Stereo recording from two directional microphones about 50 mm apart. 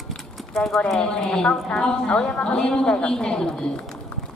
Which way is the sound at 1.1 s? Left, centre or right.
Centre.